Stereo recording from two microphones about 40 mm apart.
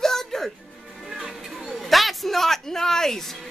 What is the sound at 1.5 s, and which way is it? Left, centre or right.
A man's voice, centre.